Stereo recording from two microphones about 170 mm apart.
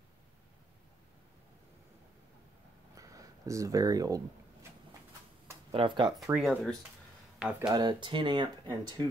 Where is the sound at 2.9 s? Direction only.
20° right (ahead or behind).